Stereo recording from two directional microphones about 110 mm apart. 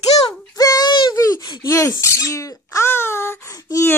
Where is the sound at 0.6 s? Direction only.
35° left (ahead or behind).